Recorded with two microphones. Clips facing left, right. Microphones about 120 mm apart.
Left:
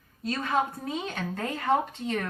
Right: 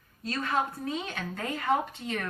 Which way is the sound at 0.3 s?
15° left (ahead or behind).